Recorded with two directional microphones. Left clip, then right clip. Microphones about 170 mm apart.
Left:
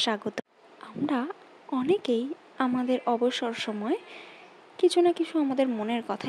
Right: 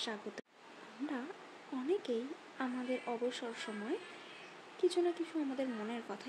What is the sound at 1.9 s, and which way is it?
Speech, 60° left (ahead or behind).